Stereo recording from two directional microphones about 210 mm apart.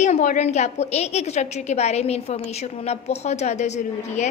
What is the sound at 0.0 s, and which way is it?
A woman's voice, 35° left (ahead or behind).